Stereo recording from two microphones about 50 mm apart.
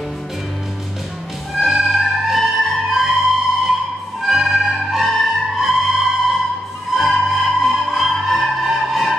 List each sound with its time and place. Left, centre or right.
1.5 s music: centre